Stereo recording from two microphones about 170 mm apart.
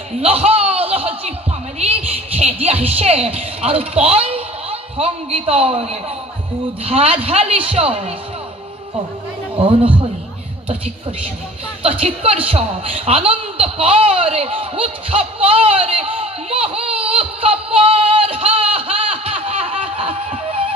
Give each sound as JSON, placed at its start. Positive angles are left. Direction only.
{"t": 0.2, "sound": "chuckle", "side_deg": -35}
{"t": 1.8, "sound": "a sound", "side_deg": -35}
{"t": 6.8, "sound": "a woman's voice", "side_deg": -35}
{"t": 9.7, "sound": "a woman's voice", "side_deg": -30}
{"t": 11.8, "sound": "a woman's voice", "side_deg": -35}
{"t": 12.4, "sound": "a sound", "side_deg": -35}